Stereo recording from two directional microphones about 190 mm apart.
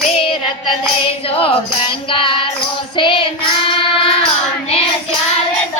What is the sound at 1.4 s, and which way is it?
Music, 30° left (ahead or behind).